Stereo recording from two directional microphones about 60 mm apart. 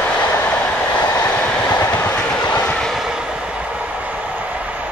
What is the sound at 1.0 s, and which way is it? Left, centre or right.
Vehicle, left.